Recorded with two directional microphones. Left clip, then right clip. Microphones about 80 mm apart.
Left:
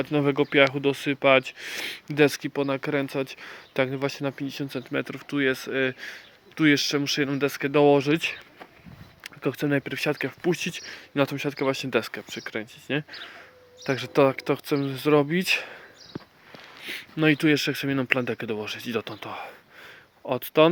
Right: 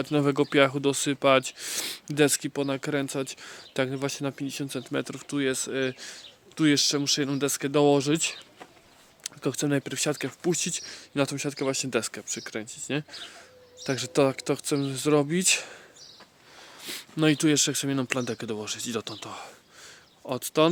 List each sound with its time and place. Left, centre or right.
0.0 s speech: right
2.0 s speech: right
5.0 s speech: right
12.5 s speech: right
16.8 s a sound: right
17.3 s speech: right